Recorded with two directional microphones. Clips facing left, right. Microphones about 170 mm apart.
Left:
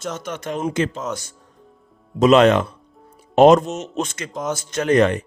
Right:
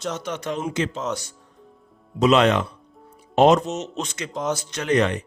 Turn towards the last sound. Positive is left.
turn(degrees=45)  # may be behind; listen again after turning